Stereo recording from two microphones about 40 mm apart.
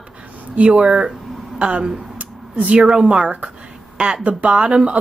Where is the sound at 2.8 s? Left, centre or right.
Right.